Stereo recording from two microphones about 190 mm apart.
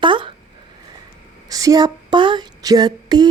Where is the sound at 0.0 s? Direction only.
25° right (ahead or behind).